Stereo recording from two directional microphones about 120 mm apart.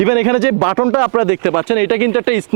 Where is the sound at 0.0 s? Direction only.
15° right (ahead or behind).